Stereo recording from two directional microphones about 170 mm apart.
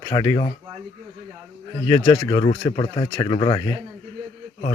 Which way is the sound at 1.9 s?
25° left (ahead or behind).